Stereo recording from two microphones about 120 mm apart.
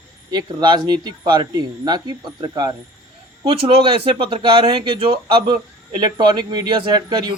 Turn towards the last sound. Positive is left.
turn(degrees=-40)  # may be behind; listen again after turning